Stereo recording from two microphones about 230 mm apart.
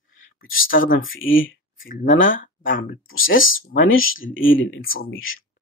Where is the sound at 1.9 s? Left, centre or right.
Left.